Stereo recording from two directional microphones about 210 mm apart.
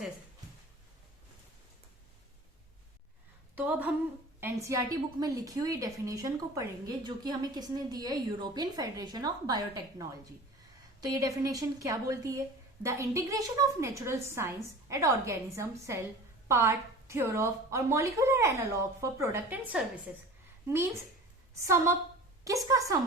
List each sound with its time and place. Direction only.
3.5 s a sound: 10° right (ahead or behind)
4.4 s a woman's voice: 10° right (ahead or behind)
22.7 s a woman's voice: 15° right (ahead or behind)